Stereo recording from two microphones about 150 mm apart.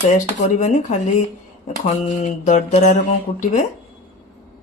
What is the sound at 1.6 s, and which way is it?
Speech, 50° left (ahead or behind).